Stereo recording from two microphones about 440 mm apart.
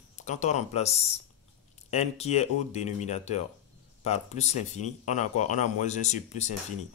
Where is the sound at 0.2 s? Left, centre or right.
Centre.